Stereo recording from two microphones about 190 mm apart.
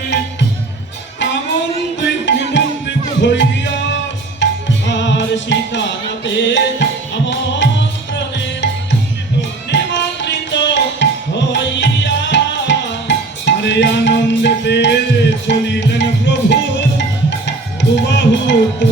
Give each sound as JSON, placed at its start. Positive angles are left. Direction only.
{"t": 2.0, "sound": "music", "side_deg": 70}